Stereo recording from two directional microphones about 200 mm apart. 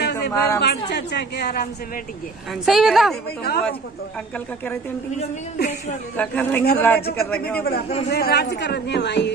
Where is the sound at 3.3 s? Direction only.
50° left (ahead or behind).